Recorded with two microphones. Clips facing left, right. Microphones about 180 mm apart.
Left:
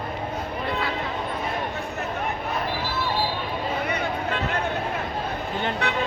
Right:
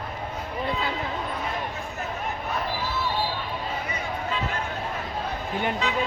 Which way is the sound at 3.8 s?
70° left (ahead or behind).